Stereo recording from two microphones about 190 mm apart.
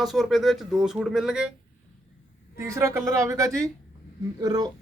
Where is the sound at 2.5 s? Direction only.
15° right (ahead or behind).